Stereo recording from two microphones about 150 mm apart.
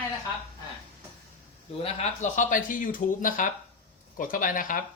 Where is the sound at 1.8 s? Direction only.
55° left (ahead or behind).